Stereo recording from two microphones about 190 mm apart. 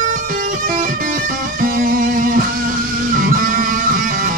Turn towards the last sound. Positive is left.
turn(degrees=-45)  # may be behind; listen again after turning